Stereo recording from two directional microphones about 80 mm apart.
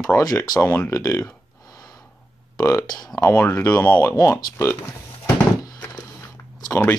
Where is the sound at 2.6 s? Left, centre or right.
Left.